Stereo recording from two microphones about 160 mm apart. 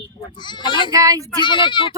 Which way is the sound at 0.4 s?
30° left (ahead or behind).